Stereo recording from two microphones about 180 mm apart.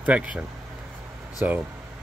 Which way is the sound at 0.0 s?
5° right (ahead or behind).